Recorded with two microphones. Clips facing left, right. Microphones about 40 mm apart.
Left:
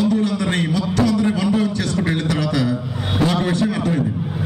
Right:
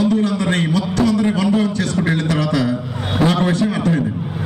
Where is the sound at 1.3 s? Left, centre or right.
Right.